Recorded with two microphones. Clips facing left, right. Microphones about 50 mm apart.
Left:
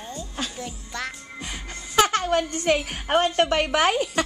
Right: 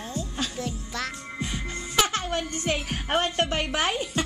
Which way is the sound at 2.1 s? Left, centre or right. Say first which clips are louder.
Left 6 dB; left.